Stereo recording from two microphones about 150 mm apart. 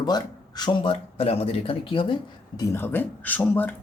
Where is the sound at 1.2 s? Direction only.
40° left (ahead or behind).